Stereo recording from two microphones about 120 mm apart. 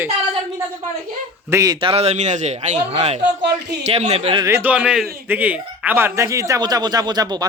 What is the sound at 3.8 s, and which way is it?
Speech, 65° right (ahead or behind).